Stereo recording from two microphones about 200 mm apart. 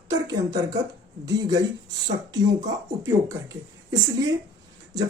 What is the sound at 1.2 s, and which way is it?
Speech, 20° right (ahead or behind).